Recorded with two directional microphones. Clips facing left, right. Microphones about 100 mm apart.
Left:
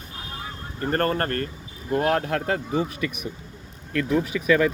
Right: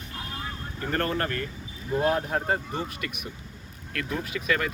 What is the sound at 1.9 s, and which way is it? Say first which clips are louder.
Speech: left 2 dB; 70° left (ahead or behind).